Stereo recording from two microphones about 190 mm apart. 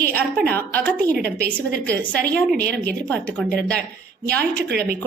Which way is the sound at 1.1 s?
60° right (ahead or behind).